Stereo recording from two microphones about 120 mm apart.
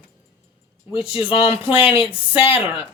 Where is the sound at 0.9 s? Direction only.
50° left (ahead or behind).